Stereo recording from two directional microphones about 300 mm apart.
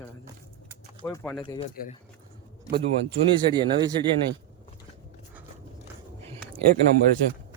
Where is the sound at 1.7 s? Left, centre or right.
Left.